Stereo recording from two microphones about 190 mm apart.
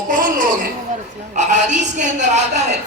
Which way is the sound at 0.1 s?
45° right (ahead or behind).